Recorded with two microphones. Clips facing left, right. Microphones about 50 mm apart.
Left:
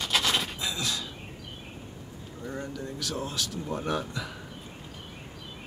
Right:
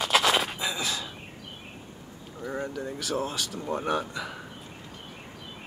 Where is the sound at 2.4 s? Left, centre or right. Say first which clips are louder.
Right 4 dB; centre.